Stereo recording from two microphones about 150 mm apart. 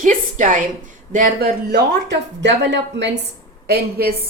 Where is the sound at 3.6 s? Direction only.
90° right.